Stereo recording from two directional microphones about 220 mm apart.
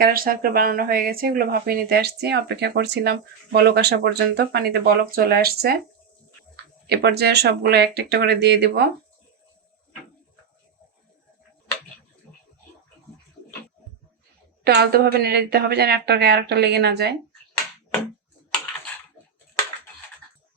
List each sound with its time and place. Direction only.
0.0 s speech: 40° right (ahead or behind)
6.8 s speech: 45° right (ahead or behind)
14.6 s speech: 45° right (ahead or behind)